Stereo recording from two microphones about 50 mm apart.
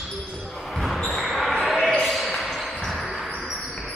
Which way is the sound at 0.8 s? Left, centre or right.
Centre.